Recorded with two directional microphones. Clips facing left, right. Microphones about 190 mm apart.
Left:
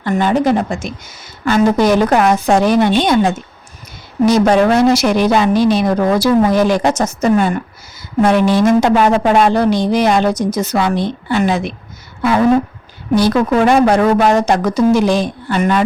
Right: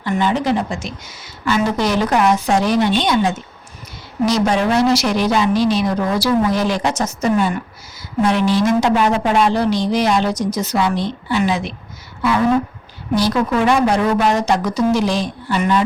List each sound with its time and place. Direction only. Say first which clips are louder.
0.0 s a woman's voice: left 4 dB; 50° left (ahead or behind)
13.1 s a woman's voice: left 4 dB; 55° left (ahead or behind)